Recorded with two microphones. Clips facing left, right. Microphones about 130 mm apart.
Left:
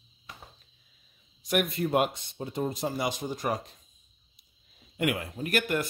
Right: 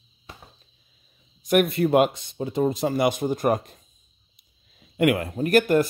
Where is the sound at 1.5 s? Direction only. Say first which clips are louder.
Right 8 dB; 60° right (ahead or behind).